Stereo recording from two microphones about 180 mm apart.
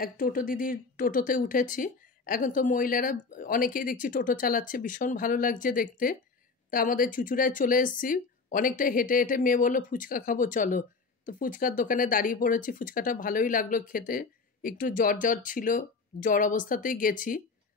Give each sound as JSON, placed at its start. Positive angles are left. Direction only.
{"t": 0.0, "sound": "speech", "side_deg": 50}